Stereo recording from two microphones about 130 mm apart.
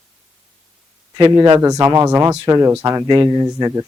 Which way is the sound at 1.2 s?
30° right (ahead or behind).